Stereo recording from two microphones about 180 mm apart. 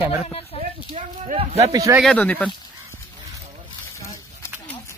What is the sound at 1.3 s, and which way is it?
Speech, 35° right (ahead or behind).